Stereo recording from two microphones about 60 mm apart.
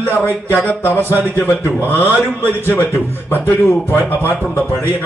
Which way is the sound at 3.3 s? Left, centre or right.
Left.